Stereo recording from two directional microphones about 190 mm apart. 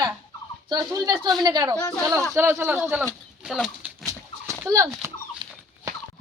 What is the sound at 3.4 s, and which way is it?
Bird flight, centre (ahead or behind).